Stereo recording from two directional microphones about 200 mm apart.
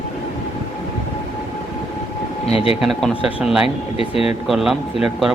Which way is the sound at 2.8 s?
Centre (ahead or behind).